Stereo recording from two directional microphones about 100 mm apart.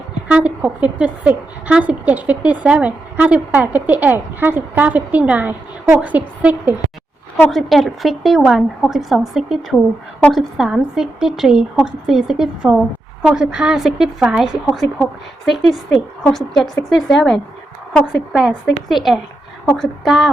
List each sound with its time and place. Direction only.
0.3 s a woman's voice: 15° right (ahead or behind)
7.5 s a woman's voice: centre (ahead or behind)
9.7 s a woman's voice: 10° left (ahead or behind)
10.3 s a woman's voice: 5° right (ahead or behind)